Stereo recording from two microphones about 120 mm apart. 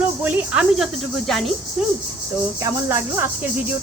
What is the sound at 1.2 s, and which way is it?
Speech, 5° left (ahead or behind).